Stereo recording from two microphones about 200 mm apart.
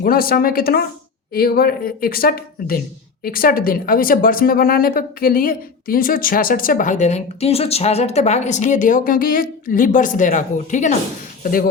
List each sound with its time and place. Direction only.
0.0 s speech: 50° left (ahead or behind)